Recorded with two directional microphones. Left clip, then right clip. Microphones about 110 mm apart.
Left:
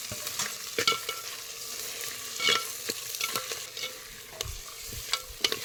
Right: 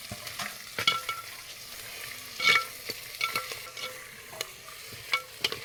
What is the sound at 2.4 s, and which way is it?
Stir, 55° left (ahead or behind).